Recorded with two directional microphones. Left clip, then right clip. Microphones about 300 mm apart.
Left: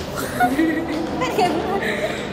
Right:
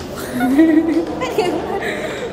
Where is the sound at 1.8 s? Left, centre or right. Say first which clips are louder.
Even; right.